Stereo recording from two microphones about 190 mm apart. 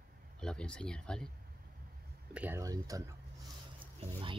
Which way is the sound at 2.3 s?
10° right (ahead or behind).